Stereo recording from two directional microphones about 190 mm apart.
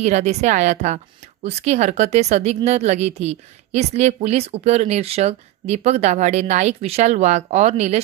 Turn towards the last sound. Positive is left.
turn(degrees=-35)  # may be behind; listen again after turning